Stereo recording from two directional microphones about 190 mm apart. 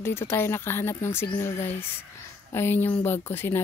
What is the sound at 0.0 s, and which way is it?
A woman's voice, 10° left (ahead or behind).